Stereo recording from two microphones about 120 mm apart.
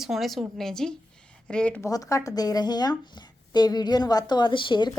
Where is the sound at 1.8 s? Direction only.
30° left (ahead or behind).